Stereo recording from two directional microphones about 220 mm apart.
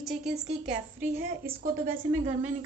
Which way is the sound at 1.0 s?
40° right (ahead or behind).